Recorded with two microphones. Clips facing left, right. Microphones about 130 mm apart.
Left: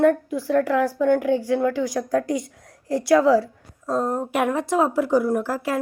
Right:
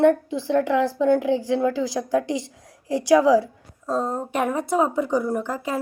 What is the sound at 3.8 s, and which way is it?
Speech, 5° left (ahead or behind).